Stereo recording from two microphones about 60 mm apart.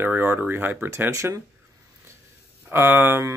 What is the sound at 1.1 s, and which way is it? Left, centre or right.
Speech, right.